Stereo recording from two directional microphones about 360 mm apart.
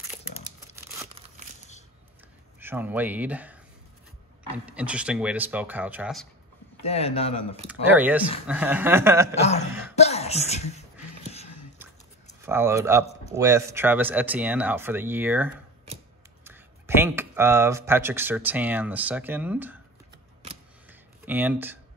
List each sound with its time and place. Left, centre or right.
0.7 s crumpling: centre
2.6 s speech: centre
4.6 s speech: centre
6.8 s a man's voice: centre
7.6 s speech: centre
9.9 s a sound: centre
12.4 s speech: centre
21.3 s speech: centre